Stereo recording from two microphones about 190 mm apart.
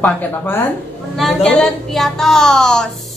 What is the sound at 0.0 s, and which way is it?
Speech, 10° left (ahead or behind).